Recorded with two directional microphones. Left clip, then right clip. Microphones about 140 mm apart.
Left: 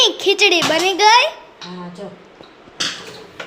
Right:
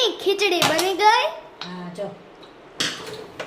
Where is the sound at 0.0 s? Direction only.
25° left (ahead or behind).